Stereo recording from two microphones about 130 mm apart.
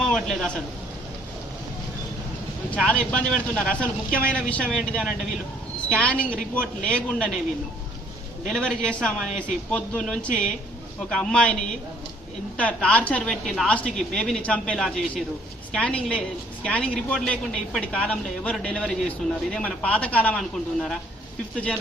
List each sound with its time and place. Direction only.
0.0 s a sound: 5° left (ahead or behind)
2.7 s a woman's voice: 10° left (ahead or behind)
8.4 s a man's voice: 5° left (ahead or behind)
12.5 s a woman's voice: 10° left (ahead or behind)